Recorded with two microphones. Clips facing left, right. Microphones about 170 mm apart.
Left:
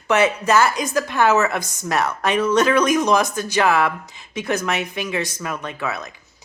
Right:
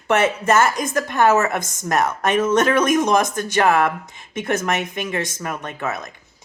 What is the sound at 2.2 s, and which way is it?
A woman's voice, 45° right (ahead or behind).